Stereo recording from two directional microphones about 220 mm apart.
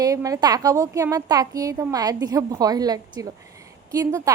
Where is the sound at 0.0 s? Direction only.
15° right (ahead or behind).